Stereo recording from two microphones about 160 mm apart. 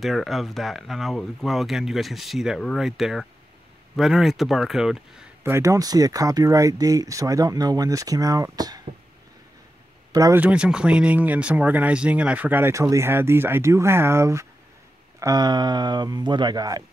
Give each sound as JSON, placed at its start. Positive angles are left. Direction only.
{"t": 0.0, "sound": "speech", "side_deg": 0}
{"t": 5.4, "sound": "speech", "side_deg": -15}
{"t": 10.1, "sound": "speech", "side_deg": -20}
{"t": 10.4, "sound": "speech", "side_deg": -5}